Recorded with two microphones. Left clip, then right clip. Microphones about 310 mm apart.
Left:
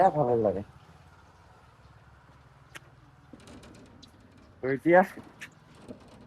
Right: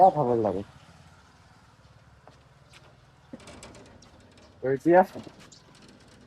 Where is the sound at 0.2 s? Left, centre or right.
Centre.